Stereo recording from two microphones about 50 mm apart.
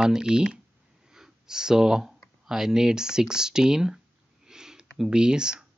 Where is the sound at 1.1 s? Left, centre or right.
Centre.